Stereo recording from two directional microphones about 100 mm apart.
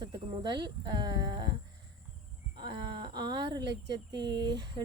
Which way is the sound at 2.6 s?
50° right (ahead or behind).